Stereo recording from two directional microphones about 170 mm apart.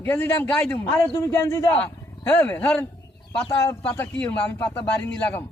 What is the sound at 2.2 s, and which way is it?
Speech, 10° left (ahead or behind).